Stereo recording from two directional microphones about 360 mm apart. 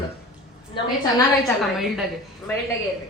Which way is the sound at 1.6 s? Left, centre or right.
Centre.